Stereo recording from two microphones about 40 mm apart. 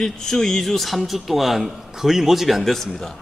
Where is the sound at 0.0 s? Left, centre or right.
Centre.